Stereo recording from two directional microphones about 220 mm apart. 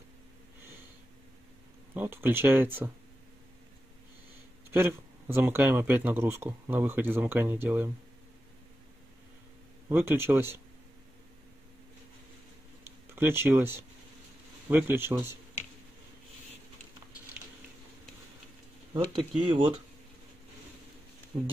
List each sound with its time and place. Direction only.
2.0 s speech: 10° right (ahead or behind)
5.3 s speech: 10° right (ahead or behind)
9.8 s speech: 10° right (ahead or behind)
12.8 s speech: 10° right (ahead or behind)
19.1 s speech: 20° right (ahead or behind)